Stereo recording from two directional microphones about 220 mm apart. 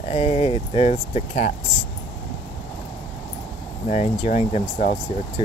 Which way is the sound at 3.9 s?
30° left (ahead or behind).